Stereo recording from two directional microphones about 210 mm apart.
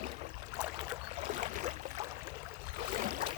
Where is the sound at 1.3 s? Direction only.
35° right (ahead or behind).